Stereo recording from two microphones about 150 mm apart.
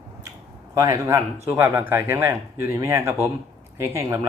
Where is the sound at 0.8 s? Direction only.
20° right (ahead or behind).